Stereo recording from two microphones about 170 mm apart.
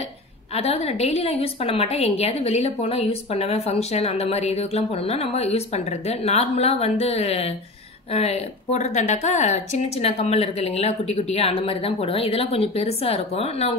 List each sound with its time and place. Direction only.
0.6 s a woman's voice: 35° left (ahead or behind)